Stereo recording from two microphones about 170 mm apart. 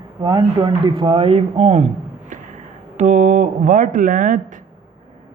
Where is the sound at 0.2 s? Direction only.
25° right (ahead or behind).